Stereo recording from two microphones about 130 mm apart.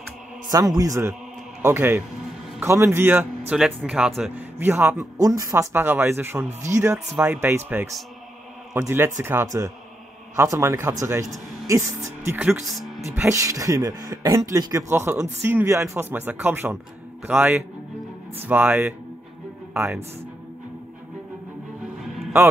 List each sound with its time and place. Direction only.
0.5 s speech: 30° right (ahead or behind); by 4.5 s 5° right (ahead or behind)
4.6 s speech: 15° right (ahead or behind)
12.4 s speech: centre (ahead or behind)
13.3 s speech: 25° right (ahead or behind)
22.0 s music: centre (ahead or behind)